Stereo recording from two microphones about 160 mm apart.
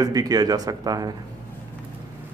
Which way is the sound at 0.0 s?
25° right (ahead or behind).